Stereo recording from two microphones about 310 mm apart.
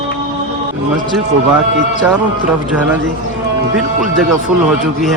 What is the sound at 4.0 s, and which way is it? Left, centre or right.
Speech, centre.